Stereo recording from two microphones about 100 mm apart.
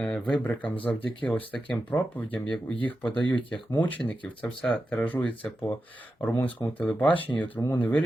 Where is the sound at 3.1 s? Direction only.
50° left (ahead or behind).